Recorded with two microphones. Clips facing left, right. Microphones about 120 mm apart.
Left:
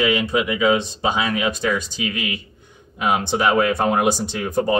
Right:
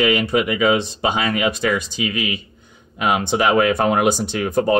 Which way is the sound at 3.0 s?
75° right (ahead or behind).